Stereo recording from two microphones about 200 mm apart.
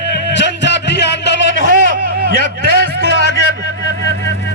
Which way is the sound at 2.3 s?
60° left (ahead or behind).